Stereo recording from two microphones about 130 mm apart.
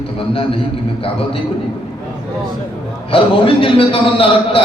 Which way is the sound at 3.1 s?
45° left (ahead or behind).